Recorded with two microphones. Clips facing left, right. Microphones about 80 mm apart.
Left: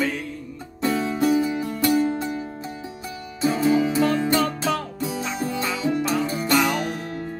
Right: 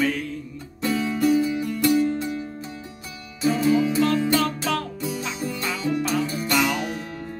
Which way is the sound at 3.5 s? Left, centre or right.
Left.